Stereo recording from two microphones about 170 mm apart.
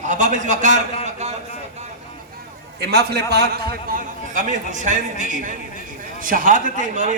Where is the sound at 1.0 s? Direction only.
40° right (ahead or behind).